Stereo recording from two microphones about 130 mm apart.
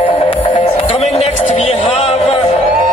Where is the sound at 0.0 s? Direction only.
45° left (ahead or behind).